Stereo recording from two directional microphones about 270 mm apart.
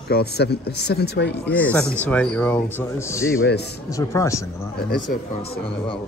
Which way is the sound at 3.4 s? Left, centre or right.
Left.